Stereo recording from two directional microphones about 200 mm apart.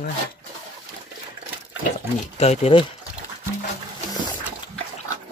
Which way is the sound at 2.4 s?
30° left (ahead or behind).